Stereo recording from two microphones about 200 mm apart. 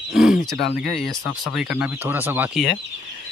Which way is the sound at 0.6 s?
50° left (ahead or behind).